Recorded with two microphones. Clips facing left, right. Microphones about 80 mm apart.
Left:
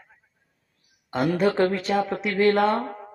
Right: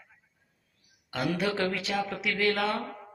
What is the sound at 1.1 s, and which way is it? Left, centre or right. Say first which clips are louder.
A woman's voice: left 7 dB; left.